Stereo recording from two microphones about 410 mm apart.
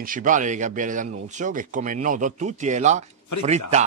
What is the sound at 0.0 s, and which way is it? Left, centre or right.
Speech, centre.